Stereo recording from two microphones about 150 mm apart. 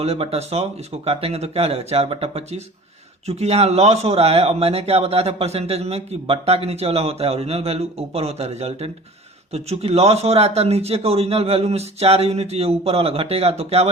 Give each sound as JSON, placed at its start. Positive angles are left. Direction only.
{"t": 0.0, "sound": "speech", "side_deg": -40}